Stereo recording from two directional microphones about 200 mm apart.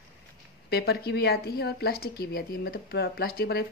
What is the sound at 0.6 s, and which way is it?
Speech, 50° left (ahead or behind).